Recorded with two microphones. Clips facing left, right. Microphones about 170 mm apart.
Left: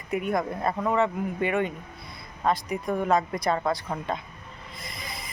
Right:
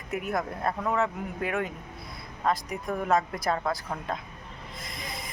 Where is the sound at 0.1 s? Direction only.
5° right (ahead or behind).